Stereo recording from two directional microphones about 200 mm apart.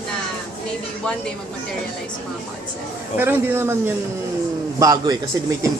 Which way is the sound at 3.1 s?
10° right (ahead or behind).